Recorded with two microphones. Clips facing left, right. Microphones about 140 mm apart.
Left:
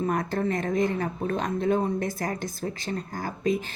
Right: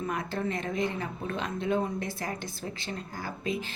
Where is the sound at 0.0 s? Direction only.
45° left (ahead or behind).